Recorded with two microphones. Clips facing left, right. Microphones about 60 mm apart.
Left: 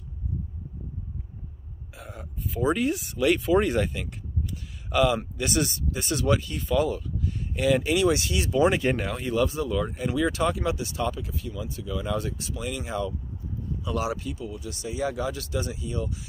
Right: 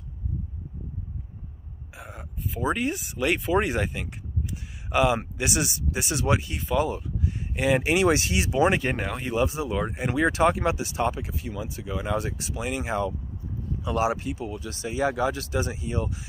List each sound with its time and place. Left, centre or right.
2.0 s speech: centre
4.8 s a sound: right
5.4 s speech: centre
7.2 s a sound: centre
7.6 s speech: right
8.6 s speech: centre
9.3 s speech: right